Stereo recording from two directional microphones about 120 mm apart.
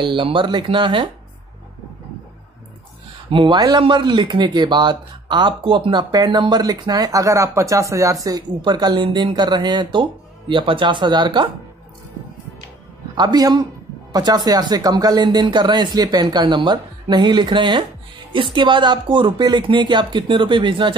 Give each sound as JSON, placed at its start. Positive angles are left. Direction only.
{"t": 0.0, "sound": "speech", "side_deg": -45}
{"t": 3.3, "sound": "speech", "side_deg": -40}
{"t": 13.1, "sound": "speech", "side_deg": -35}